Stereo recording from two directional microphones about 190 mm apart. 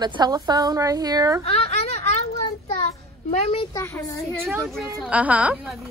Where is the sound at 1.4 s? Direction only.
30° left (ahead or behind).